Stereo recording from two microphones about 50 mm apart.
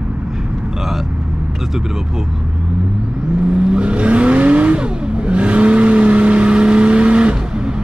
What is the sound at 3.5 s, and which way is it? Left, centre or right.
Vehicle, centre.